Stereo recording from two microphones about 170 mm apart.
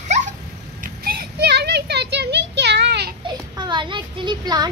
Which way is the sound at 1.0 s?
75° right (ahead or behind).